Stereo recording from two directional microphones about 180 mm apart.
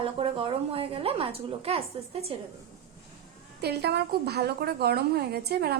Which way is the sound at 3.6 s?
65° right (ahead or behind).